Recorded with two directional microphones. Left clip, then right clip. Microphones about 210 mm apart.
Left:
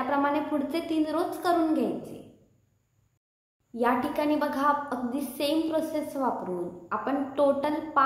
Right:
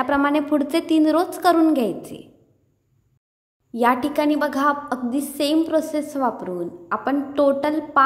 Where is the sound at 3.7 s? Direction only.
45° right (ahead or behind).